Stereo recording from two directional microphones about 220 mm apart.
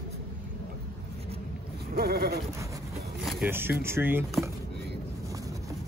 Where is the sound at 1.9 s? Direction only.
45° right (ahead or behind).